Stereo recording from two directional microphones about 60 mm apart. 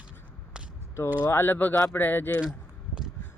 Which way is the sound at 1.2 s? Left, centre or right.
Left.